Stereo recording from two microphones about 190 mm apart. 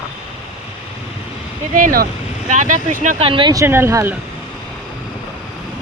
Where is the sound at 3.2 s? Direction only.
25° right (ahead or behind).